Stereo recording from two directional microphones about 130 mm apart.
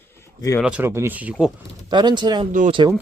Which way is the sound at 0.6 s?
15° right (ahead or behind).